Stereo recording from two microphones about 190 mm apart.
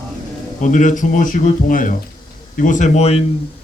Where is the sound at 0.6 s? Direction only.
40° left (ahead or behind).